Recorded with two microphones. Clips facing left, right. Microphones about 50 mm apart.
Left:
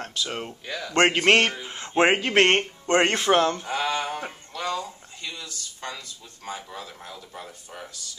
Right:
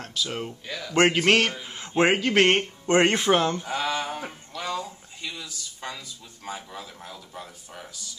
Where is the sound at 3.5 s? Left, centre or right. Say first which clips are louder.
Left 1 dB; centre.